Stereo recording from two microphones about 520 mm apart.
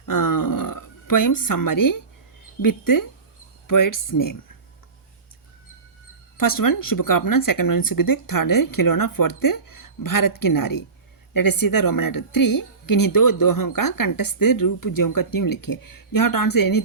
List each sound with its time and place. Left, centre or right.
0.0 s a sound: left
2.6 s a woman's voice: left
6.3 s a woman's voice: left